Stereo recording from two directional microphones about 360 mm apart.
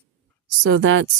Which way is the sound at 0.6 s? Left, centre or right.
Right.